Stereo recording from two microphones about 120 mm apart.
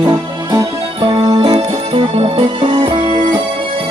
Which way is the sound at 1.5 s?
50° right (ahead or behind).